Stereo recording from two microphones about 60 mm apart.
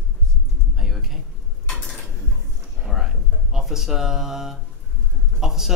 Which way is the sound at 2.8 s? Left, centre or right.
Centre.